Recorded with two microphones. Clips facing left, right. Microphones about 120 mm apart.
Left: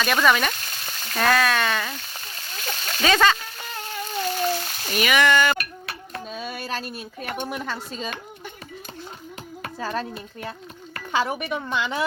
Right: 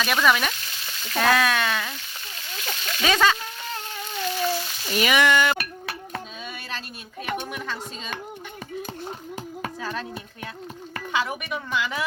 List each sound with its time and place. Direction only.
0.0 s speech: 5° right (ahead or behind)
0.5 s frying: 45° left (ahead or behind)
1.2 s speech: 5° right (ahead or behind)
2.6 s a sound: 40° left (ahead or behind)
3.0 s speech: 5° right (ahead or behind)
4.3 s frying: 40° left (ahead or behind)
4.9 s speech: 20° right (ahead or behind)
6.3 s a sound: 40° left (ahead or behind)
7.5 s a woman's voice: 40° left (ahead or behind)
9.8 s a woman's voice: 35° left (ahead or behind)